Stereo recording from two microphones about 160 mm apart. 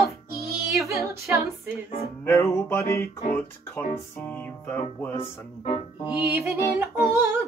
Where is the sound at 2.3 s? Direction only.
15° left (ahead or behind).